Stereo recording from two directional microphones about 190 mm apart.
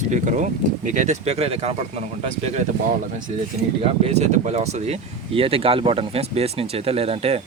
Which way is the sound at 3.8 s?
35° right (ahead or behind).